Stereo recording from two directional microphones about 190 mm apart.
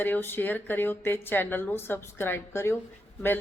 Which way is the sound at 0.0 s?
10° left (ahead or behind).